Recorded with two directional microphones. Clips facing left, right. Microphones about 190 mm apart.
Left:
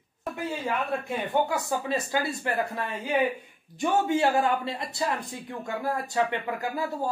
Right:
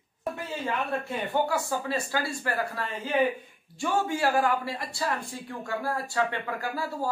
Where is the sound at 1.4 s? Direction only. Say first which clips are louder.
Even; 20° left (ahead or behind).